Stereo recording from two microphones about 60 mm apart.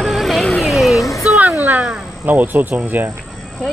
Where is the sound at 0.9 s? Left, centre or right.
Left.